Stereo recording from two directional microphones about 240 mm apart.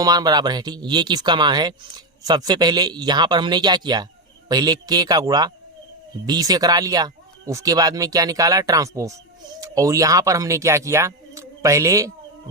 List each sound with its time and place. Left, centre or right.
0.0 s speech: centre